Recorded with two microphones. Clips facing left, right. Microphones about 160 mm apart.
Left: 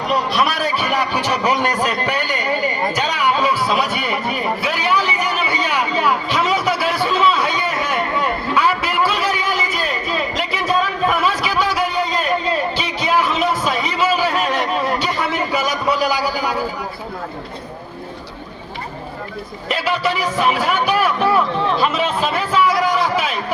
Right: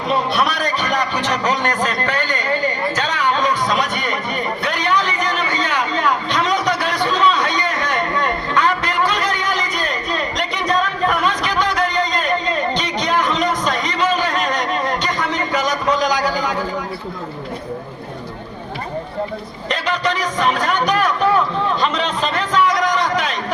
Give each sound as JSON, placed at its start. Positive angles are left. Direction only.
{"t": 0.3, "sound": "a man's voice", "side_deg": 5}
{"t": 2.9, "sound": "music", "side_deg": 10}
{"t": 19.6, "sound": "music", "side_deg": 5}